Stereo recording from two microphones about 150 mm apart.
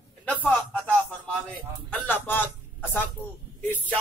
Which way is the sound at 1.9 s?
10° left (ahead or behind).